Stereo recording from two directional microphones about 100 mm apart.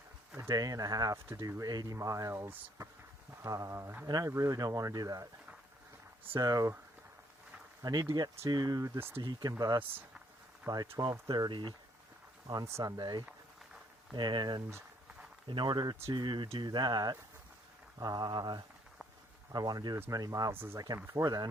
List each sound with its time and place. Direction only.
0.3 s speech: 35° right (ahead or behind)
1.1 s speech: 30° right (ahead or behind)
4.0 s speech: 40° right (ahead or behind)
6.4 s speech: 35° right (ahead or behind)
7.8 s speech: 40° right (ahead or behind)
9.0 s speech: 20° right (ahead or behind)
9.2 s speech: 45° right (ahead or behind)
10.7 s speech: 25° right (ahead or behind)
11.3 s speech: 45° right (ahead or behind)
12.8 s speech: 45° right (ahead or behind)
20.5 s speech: 25° right (ahead or behind)
20.7 s speech: 35° right (ahead or behind)